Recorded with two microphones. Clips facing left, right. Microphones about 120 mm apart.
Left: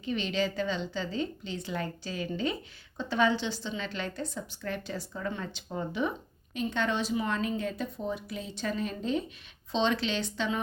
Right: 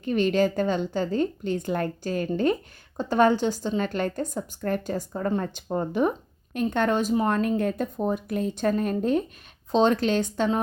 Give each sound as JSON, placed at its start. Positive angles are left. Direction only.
{"t": 0.0, "sound": "speech", "side_deg": -50}